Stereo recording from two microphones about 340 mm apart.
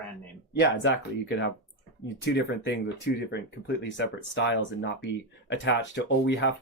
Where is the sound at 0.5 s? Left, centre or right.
Left.